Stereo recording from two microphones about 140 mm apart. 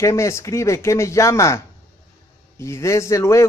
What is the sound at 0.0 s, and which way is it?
Speech, 20° left (ahead or behind).